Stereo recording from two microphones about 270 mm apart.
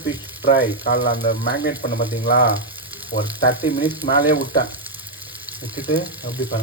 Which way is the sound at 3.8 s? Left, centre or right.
Centre.